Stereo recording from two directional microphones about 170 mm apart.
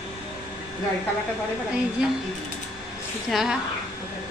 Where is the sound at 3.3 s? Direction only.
Centre (ahead or behind).